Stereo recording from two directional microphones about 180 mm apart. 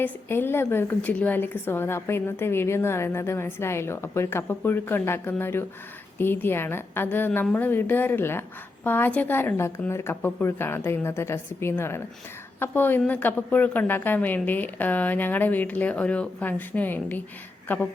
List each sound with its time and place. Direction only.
0.0 s a woman's voice: 10° left (ahead or behind)